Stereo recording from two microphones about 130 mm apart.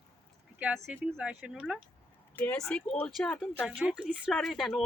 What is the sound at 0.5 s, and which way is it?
Speech, 10° right (ahead or behind).